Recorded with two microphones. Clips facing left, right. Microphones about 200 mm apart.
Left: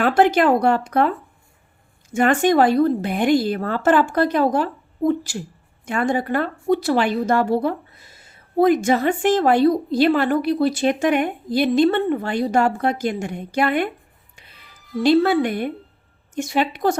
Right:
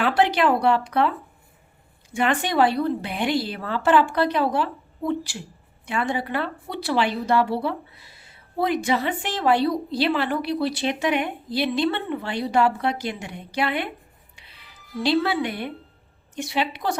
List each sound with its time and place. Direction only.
0.0 s a woman's voice: 45° left (ahead or behind)
14.3 s music: 45° left (ahead or behind)
16.3 s a woman's voice: 45° left (ahead or behind)